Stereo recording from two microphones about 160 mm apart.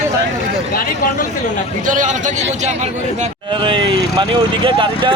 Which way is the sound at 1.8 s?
50° right (ahead or behind).